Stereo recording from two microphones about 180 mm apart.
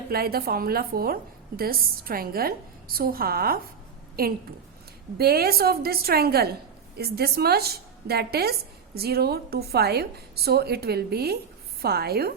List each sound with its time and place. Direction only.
0.1 s a woman's voice: 55° right (ahead or behind)